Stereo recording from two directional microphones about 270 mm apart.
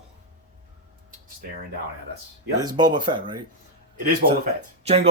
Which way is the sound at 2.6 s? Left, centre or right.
Centre.